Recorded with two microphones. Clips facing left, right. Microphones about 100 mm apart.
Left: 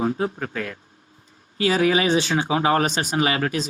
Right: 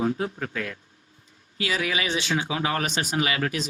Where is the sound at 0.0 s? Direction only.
35° left (ahead or behind).